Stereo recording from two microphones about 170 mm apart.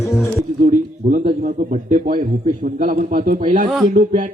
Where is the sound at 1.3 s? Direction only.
50° right (ahead or behind).